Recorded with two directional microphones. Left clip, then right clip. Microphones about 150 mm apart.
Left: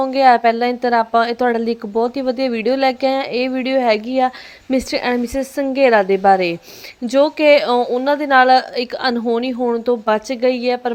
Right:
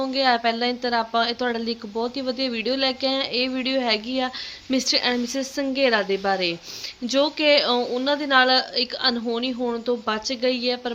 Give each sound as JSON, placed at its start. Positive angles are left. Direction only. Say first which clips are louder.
{"t": 0.0, "sound": "a woman's voice", "louder": "left 9 dB", "side_deg": 55}